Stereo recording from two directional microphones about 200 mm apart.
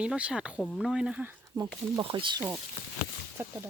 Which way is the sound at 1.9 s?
25° right (ahead or behind).